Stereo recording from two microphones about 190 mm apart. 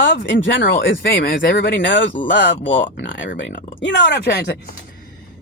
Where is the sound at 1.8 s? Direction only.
75° left (ahead or behind); by 4.7 s 60° left (ahead or behind).